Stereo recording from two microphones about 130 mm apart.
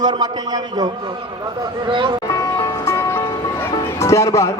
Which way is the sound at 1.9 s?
40° right (ahead or behind).